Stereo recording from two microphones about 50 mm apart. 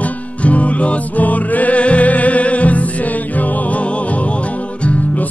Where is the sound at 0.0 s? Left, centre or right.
Left.